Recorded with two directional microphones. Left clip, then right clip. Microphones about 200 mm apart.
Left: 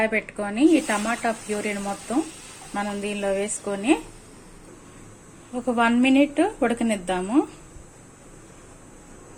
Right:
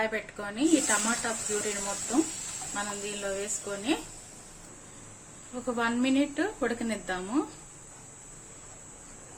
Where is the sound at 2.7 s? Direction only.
15° left (ahead or behind).